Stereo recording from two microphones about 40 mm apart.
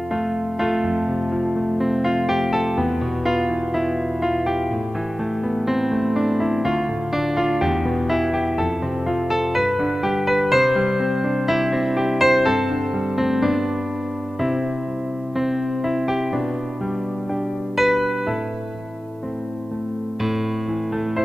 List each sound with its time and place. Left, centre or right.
0.1 s music: centre
15.3 s music: centre
17.7 s music: centre